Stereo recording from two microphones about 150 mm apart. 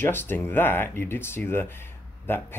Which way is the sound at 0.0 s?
15° left (ahead or behind).